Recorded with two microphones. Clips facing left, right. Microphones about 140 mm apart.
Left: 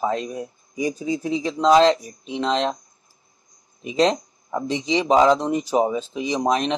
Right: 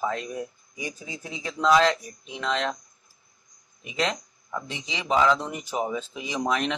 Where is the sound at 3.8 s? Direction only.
30° left (ahead or behind).